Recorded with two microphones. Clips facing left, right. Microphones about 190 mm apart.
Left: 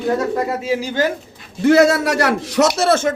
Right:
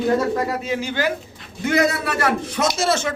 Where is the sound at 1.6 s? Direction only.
70° left (ahead or behind).